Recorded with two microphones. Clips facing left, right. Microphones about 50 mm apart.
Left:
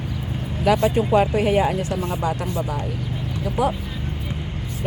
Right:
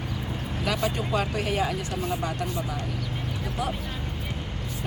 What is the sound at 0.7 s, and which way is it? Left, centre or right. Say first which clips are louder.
Speech: left 10 dB; centre.